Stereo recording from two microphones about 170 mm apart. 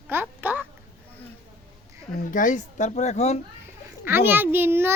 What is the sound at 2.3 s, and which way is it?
Speech, 50° left (ahead or behind).